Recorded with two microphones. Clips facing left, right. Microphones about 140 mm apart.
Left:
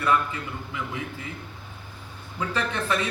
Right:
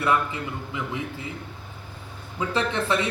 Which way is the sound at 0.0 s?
20° right (ahead or behind).